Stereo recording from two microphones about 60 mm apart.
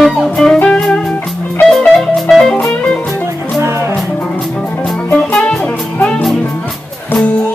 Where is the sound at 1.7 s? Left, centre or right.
Centre.